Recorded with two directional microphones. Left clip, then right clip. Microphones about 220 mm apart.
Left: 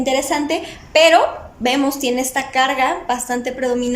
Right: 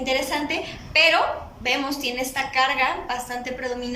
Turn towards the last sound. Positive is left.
turn(degrees=35)  # may be behind; listen again after turning